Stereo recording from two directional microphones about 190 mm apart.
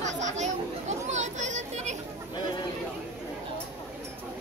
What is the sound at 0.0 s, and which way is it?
Chatter, 40° right (ahead or behind).